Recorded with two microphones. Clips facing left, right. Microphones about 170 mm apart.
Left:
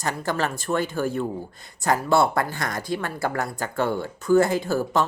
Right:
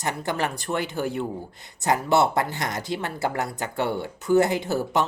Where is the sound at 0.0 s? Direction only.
20° right (ahead or behind).